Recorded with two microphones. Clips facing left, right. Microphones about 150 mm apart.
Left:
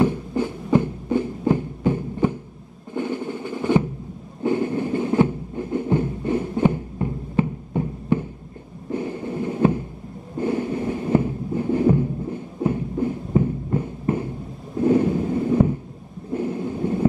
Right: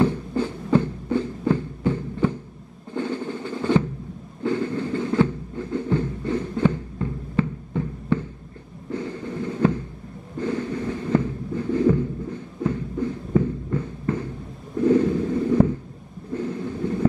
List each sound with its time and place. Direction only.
0.0 s throbbing: 15° left (ahead or behind)
2.9 s drum: 15° left (ahead or behind)
4.4 s a sound: 15° left (ahead or behind)
10.3 s heart sounds: 15° left (ahead or behind)
14.8 s a sound: 20° left (ahead or behind)
16.3 s thunder: 15° left (ahead or behind)